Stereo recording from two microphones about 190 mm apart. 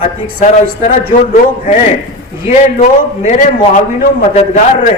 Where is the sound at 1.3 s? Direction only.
40° left (ahead or behind).